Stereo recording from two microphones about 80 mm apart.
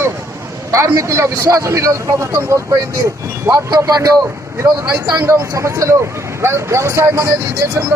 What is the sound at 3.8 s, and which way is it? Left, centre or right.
Speech, right.